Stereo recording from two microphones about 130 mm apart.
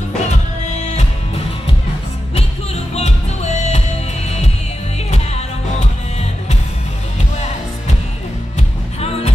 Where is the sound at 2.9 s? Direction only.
55° left (ahead or behind).